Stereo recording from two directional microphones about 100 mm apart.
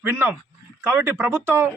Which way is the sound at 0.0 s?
20° right (ahead or behind).